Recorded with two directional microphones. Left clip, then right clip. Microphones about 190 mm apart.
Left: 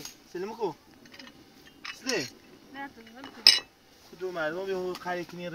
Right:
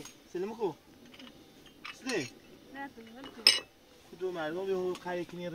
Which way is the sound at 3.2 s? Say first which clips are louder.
Left 5 dB; 25° left (ahead or behind).